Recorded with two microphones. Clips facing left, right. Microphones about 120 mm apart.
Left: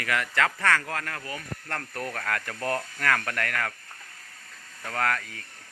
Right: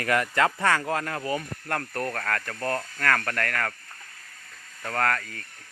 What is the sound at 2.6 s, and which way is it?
Speech, 20° left (ahead or behind).